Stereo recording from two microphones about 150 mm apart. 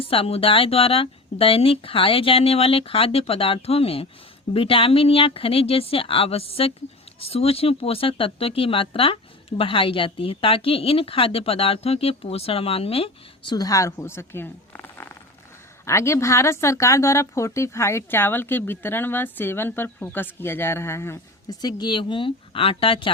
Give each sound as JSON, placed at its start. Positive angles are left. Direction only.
{"t": 0.0, "sound": "speech", "side_deg": 40}
{"t": 13.5, "sound": "speech", "side_deg": 25}